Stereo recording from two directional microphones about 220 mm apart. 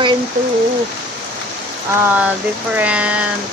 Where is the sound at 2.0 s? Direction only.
10° right (ahead or behind).